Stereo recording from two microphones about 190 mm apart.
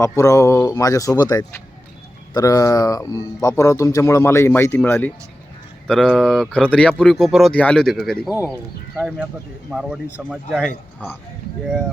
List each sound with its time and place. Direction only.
0.0 s speech: 15° left (ahead or behind); by 10.7 s 5° right (ahead or behind)